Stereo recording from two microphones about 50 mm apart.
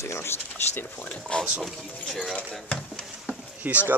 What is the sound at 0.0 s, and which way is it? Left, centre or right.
Speech, left.